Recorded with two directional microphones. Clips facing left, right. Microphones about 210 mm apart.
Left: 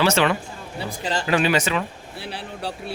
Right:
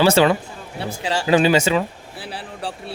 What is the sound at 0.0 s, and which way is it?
A man's voice, 30° right (ahead or behind).